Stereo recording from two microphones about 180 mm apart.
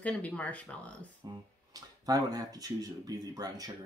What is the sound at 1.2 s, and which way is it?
Speech, 20° right (ahead or behind).